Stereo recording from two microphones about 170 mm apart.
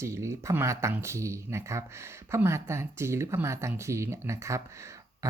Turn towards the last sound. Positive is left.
turn(degrees=-15)  # may be behind; listen again after turning